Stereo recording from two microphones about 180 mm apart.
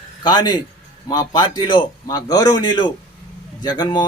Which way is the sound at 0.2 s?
25° left (ahead or behind).